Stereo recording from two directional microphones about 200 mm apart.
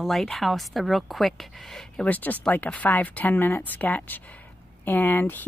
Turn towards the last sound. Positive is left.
turn(degrees=10)  # may be behind; listen again after turning